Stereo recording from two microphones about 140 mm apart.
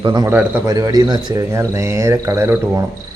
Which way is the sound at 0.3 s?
15° right (ahead or behind).